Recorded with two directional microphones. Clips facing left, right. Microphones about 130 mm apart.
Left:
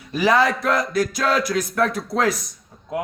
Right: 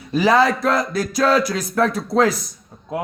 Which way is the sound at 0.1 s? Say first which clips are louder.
Right 2 dB; 30° right (ahead or behind).